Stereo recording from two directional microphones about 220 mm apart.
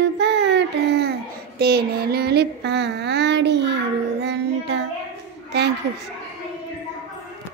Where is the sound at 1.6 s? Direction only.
45° right (ahead or behind).